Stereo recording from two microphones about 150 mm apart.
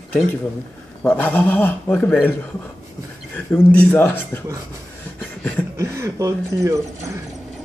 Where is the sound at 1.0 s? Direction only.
10° left (ahead or behind).